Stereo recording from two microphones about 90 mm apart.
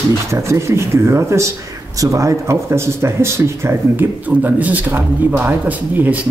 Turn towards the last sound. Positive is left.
turn(degrees=-15)  # may be behind; listen again after turning